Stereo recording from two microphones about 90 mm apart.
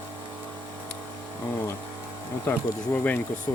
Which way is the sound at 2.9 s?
20° left (ahead or behind).